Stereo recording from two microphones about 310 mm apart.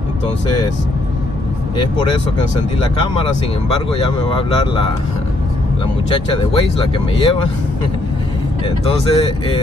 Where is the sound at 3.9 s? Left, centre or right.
Centre.